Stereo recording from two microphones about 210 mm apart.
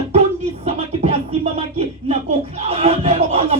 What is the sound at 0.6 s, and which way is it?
Music, 30° right (ahead or behind).